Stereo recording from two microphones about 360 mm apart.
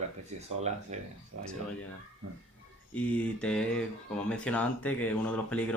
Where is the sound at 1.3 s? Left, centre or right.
Right.